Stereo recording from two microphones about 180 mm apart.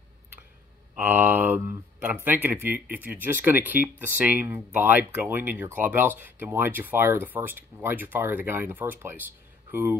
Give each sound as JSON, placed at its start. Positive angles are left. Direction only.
{"t": 0.9, "sound": "speech", "side_deg": -10}